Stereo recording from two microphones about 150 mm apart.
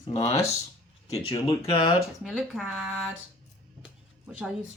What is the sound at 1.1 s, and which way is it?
Speech, 45° left (ahead or behind).